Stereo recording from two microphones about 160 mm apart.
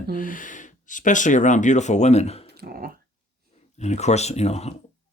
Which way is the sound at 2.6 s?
70° right (ahead or behind).